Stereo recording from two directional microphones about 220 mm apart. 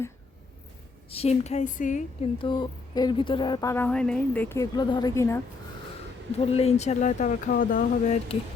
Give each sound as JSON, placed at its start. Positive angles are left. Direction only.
{"t": 1.1, "sound": "speech", "side_deg": 30}
{"t": 2.5, "sound": "speech", "side_deg": 20}
{"t": 6.4, "sound": "speech", "side_deg": 25}